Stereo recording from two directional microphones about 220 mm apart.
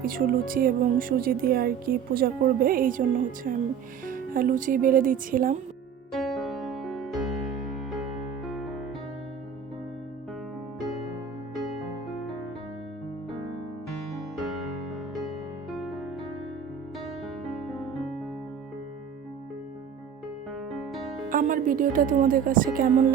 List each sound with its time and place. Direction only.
0.0 s speech: 40° right (ahead or behind)
6.1 s music: centre (ahead or behind)
14.3 s music: centre (ahead or behind)
15.8 s music: centre (ahead or behind)
20.7 s music: centre (ahead or behind)
21.2 s speech: 40° right (ahead or behind)